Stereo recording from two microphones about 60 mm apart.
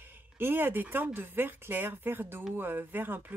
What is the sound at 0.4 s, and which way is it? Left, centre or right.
Speech, right.